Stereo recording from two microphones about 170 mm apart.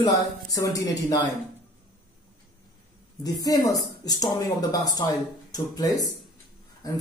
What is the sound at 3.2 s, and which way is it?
Speech, 20° left (ahead or behind).